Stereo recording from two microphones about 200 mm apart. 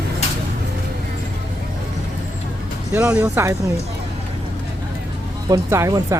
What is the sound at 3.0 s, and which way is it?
Speech, 5° right (ahead or behind).